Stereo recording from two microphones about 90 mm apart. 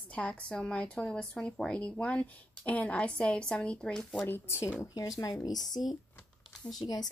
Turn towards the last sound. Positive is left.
turn(degrees=45)  # may be behind; listen again after turning